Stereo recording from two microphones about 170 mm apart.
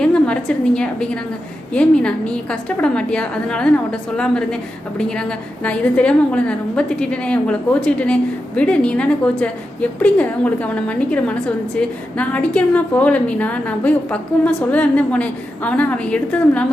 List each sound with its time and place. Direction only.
0.0 s a woman's voice: 5° left (ahead or behind)